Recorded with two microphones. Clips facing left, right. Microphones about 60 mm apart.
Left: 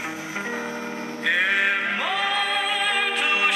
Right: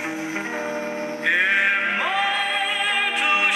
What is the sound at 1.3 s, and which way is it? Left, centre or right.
Music, right.